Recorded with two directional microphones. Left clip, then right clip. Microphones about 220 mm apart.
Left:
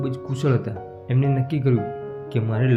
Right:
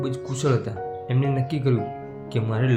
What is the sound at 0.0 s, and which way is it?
Speech, 15° right (ahead or behind).